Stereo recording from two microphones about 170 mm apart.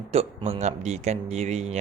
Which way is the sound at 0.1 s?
35° right (ahead or behind).